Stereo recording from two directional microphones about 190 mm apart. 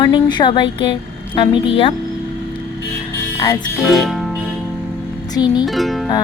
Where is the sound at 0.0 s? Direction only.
25° left (ahead or behind).